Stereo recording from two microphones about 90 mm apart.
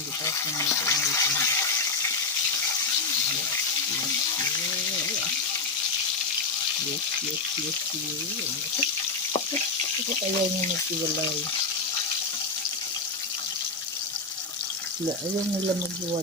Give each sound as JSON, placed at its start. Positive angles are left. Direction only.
{"t": 0.3, "sound": "water", "side_deg": 35}